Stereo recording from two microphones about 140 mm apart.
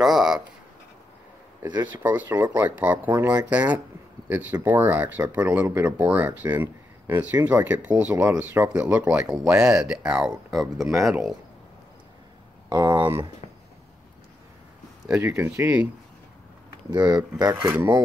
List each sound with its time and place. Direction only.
0.0 s a sound: centre (ahead or behind)
2.0 s speech: 10° right (ahead or behind)
12.6 s speech: 35° right (ahead or behind)
15.0 s speech: 5° right (ahead or behind)
15.3 s speech: 20° right (ahead or behind)
16.9 s speech: 30° right (ahead or behind)
17.6 s speech: 5° right (ahead or behind)